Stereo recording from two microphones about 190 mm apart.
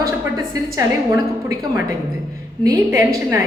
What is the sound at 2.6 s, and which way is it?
Speech, 15° right (ahead or behind).